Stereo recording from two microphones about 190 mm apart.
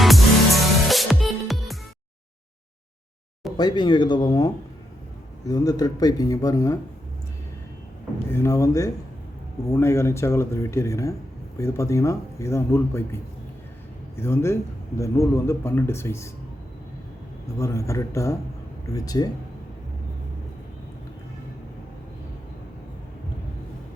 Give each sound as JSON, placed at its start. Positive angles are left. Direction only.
{"t": 0.0, "sound": "music", "side_deg": 0}
{"t": 3.6, "sound": "speech", "side_deg": 25}
{"t": 8.3, "sound": "a man's voice", "side_deg": 15}
{"t": 14.2, "sound": "a man's voice", "side_deg": 15}
{"t": 17.6, "sound": "a man's voice", "side_deg": 15}